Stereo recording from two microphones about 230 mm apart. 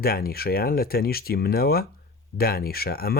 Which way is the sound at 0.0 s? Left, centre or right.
Left.